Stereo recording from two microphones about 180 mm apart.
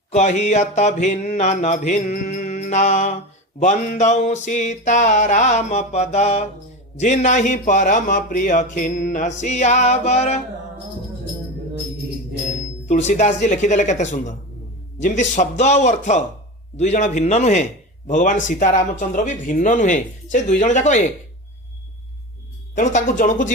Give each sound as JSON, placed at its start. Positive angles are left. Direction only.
{"t": 0.1, "sound": "a man's voice", "side_deg": 40}
{"t": 12.9, "sound": "a man's voice", "side_deg": 40}
{"t": 22.7, "sound": "a man's voice", "side_deg": 45}